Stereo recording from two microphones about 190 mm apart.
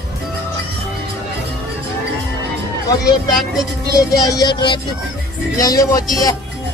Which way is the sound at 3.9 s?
20° left (ahead or behind).